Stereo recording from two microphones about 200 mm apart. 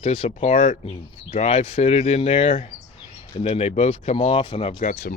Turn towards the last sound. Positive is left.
turn(degrees=45)  # may be behind; listen again after turning